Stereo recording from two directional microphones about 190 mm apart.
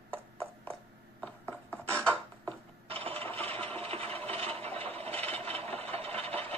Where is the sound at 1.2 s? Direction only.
10° left (ahead or behind).